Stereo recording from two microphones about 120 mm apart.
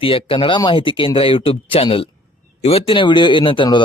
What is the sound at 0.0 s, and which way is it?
A man's voice, 50° left (ahead or behind).